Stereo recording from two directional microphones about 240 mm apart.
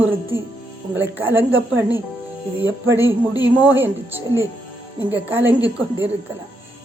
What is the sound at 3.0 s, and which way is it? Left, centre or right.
Speech, centre.